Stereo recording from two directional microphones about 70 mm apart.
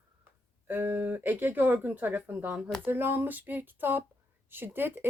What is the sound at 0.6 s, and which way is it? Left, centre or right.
Speech, right.